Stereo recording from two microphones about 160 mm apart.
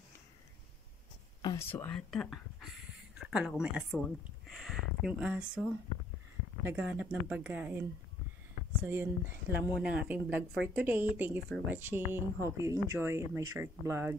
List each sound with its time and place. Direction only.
1.6 s speech: 15° left (ahead or behind)
2.0 s speech: centre (ahead or behind)
8.8 s speech: 15° right (ahead or behind)